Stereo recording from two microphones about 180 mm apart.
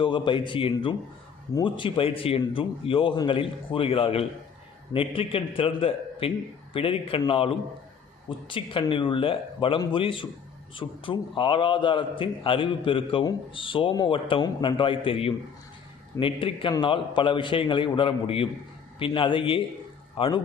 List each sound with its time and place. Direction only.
0.0 s a man's voice: 25° left (ahead or behind)